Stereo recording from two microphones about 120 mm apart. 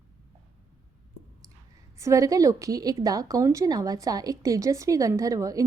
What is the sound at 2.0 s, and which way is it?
A woman's voice, 25° right (ahead or behind).